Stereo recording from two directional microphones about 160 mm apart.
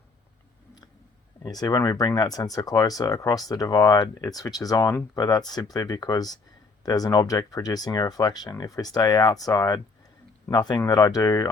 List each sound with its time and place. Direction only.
1.4 s speech: 25° left (ahead or behind)